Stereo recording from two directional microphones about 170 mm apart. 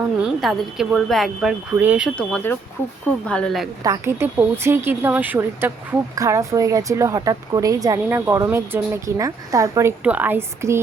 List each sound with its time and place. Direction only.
0.2 s speech: 5° right (ahead or behind)
2.1 s speech: 10° left (ahead or behind)
3.8 s a woman's voice: 15° right (ahead or behind)